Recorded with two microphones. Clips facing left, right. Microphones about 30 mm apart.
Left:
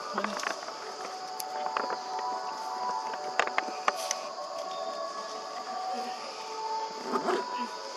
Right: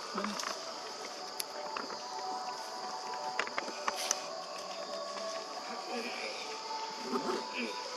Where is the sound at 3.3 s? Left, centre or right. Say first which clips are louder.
Left 11 dB; left.